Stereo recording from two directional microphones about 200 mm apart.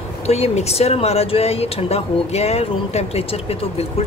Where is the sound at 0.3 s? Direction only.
30° left (ahead or behind).